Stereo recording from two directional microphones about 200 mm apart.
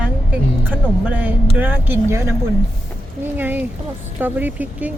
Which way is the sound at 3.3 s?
10° right (ahead or behind).